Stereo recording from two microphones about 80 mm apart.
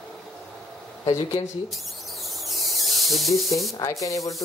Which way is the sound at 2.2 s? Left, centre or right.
Centre.